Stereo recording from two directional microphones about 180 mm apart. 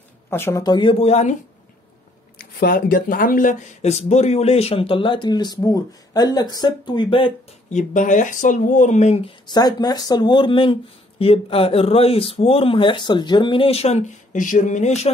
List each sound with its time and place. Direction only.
0.3 s speech: 15° left (ahead or behind); by 1.3 s 35° left (ahead or behind)
2.3 s speech: 55° left (ahead or behind); by 7.8 s 30° left (ahead or behind)
7.9 s speech: 45° left (ahead or behind)
9.5 s speech: 20° left (ahead or behind); by 15.0 s 40° left (ahead or behind)